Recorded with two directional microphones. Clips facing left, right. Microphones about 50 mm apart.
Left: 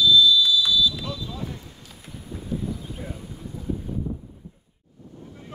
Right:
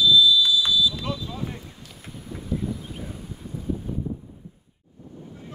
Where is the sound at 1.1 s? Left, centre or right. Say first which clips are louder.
Right 3 dB; right.